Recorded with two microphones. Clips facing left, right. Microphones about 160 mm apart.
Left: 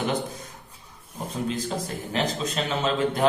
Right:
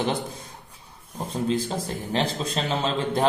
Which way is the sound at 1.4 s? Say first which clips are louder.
Right 2 dB; 40° right (ahead or behind).